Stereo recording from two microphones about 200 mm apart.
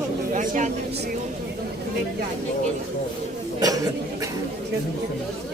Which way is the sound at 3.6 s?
15° right (ahead or behind).